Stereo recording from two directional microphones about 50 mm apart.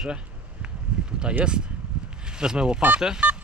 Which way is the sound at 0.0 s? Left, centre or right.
Centre.